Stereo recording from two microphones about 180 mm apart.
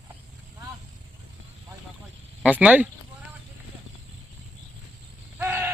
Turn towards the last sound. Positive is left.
turn(degrees=-10)  # may be behind; listen again after turning